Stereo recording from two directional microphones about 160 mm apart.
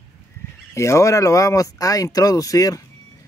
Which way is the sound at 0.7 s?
20° left (ahead or behind).